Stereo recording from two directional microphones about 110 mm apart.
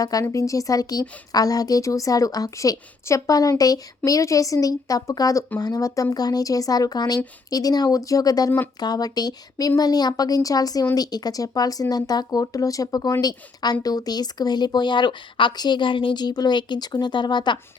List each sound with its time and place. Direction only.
0.0 s speech: 30° left (ahead or behind)